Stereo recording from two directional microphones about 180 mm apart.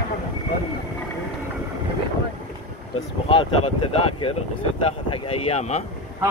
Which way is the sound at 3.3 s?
30° left (ahead or behind).